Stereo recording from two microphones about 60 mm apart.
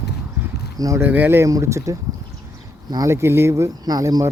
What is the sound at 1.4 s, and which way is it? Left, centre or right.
Speech, right.